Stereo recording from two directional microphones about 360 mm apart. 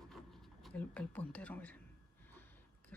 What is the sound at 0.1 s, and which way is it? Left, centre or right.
Speech, centre.